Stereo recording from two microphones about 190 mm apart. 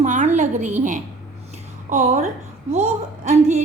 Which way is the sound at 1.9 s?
35° right (ahead or behind).